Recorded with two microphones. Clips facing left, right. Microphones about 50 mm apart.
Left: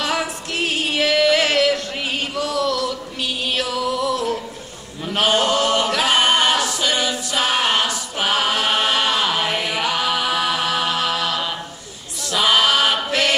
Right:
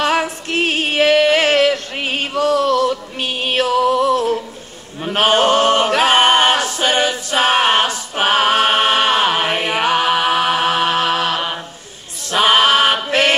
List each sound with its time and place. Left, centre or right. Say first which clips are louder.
0.0 s female singing: right 5 dB; right
5.0 s a capella: right 4 dB; right
12.3 s chant: right 4 dB; right